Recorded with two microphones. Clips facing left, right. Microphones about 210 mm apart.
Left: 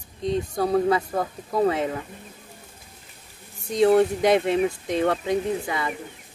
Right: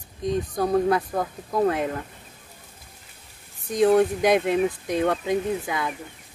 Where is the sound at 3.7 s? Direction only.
Centre (ahead or behind).